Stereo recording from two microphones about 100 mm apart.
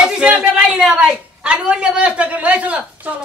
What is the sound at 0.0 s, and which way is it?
A woman's voice, 5° right (ahead or behind).